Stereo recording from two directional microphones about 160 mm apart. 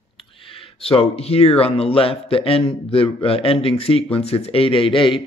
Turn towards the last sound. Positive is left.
turn(degrees=30)  # may be behind; listen again after turning